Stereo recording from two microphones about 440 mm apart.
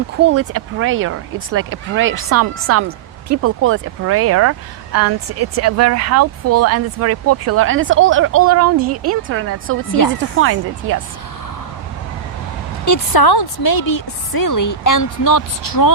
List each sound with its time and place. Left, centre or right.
0.2 s speech: right
12.8 s a woman's voice: left